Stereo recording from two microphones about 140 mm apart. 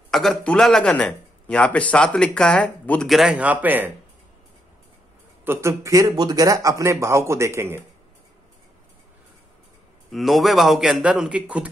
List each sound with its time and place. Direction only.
0.1 s a man's voice: centre (ahead or behind)
5.4 s a man's voice: 20° right (ahead or behind)
10.1 s a man's voice: centre (ahead or behind)